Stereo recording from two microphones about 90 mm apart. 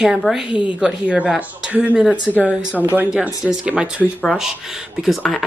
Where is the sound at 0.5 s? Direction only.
70° left (ahead or behind).